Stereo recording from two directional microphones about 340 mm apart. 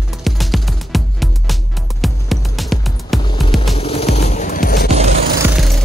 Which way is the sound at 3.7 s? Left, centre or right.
Centre.